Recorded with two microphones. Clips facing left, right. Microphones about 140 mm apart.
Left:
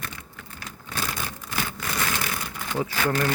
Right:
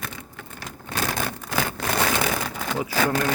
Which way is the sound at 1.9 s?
75° right (ahead or behind).